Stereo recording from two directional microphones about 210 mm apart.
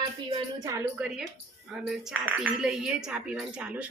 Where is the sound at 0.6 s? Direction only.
15° right (ahead or behind).